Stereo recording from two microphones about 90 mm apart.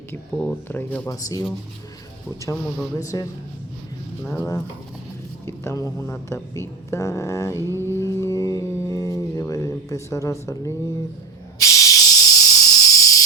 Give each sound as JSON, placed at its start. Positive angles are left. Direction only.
{"t": 0.7, "sound": "speech", "side_deg": 20}
{"t": 1.0, "sound": "speech", "side_deg": 40}
{"t": 4.2, "sound": "speech", "side_deg": 20}
{"t": 5.5, "sound": "speech", "side_deg": 35}
{"t": 6.6, "sound": "mantra", "side_deg": 35}
{"t": 9.5, "sound": "speech", "side_deg": 35}
{"t": 11.6, "sound": "hiss", "side_deg": 40}